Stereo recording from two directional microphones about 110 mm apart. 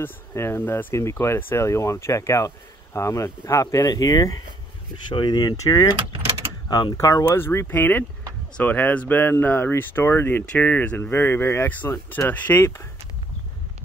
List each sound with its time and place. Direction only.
0.0 s speech: 25° left (ahead or behind)
7.2 s speech: 20° left (ahead or behind)